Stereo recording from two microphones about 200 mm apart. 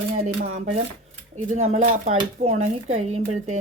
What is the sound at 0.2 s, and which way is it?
Speech, 35° right (ahead or behind).